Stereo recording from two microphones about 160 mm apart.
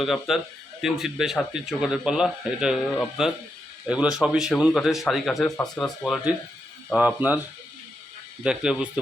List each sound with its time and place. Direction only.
0.0 s speech: centre (ahead or behind)
6.9 s speech: 10° right (ahead or behind)
8.4 s speech: 5° right (ahead or behind)